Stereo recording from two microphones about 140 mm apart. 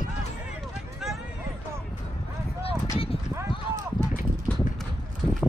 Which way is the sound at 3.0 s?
45° left (ahead or behind).